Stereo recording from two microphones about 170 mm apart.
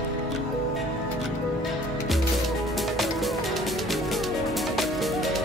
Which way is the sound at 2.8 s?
Centre (ahead or behind).